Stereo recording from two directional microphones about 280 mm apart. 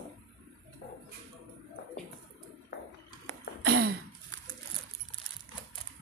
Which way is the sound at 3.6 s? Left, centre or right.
Right.